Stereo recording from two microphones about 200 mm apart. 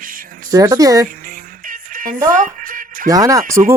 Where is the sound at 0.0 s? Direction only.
45° right (ahead or behind).